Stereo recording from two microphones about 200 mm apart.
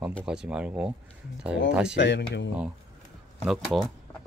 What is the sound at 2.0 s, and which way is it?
Speech, 60° left (ahead or behind).